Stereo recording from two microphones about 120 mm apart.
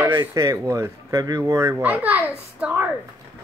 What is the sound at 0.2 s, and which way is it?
Speech, 25° right (ahead or behind).